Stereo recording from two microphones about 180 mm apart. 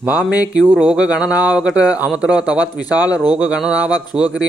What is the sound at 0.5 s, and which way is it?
A man's voice, 5° right (ahead or behind).